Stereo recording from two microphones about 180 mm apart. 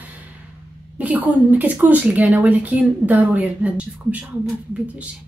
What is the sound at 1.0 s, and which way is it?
A woman's voice, 10° right (ahead or behind).